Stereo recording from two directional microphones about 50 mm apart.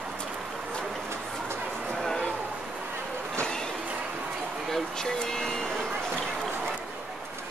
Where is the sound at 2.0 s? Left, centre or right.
Centre.